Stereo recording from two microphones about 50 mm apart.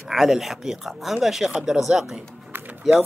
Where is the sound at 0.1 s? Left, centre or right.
Centre.